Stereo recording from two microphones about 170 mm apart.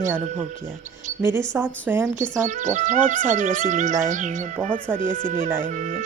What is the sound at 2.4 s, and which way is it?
Speech, 45° right (ahead or behind).